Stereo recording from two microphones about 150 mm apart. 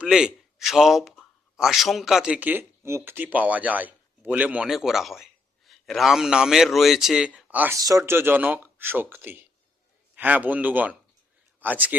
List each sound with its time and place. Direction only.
0.0 s a man's voice: 5° right (ahead or behind)
7.8 s speech: 20° right (ahead or behind)